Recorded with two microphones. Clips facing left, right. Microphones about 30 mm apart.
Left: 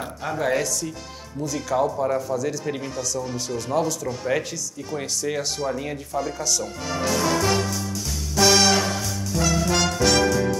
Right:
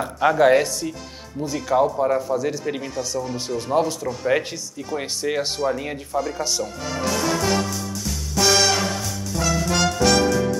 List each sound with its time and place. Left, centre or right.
0.2 s speech: right
1.4 s speech: right
1.9 s speech: centre
2.2 s speech: right
6.6 s music: centre